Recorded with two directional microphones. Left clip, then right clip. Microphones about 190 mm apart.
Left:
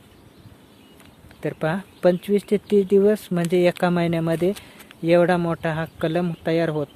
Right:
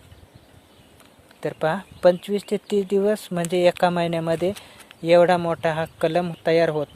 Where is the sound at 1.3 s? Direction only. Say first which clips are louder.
Right 2 dB; 15° right (ahead or behind).